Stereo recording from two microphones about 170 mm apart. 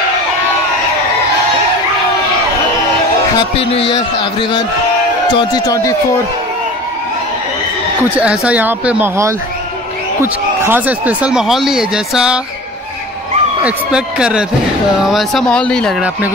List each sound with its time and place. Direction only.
3.3 s a man's voice: 35° left (ahead or behind)
8.0 s speech: 10° right (ahead or behind)
13.7 s speech: 5° right (ahead or behind)